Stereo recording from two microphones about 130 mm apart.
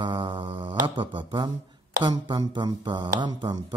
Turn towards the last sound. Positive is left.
turn(degrees=-35)  # may be behind; listen again after turning